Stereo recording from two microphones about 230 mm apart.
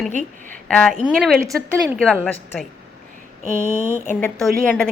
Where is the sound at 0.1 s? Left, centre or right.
Right.